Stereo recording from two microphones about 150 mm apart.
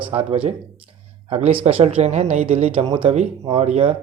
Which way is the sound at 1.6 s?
40° right (ahead or behind).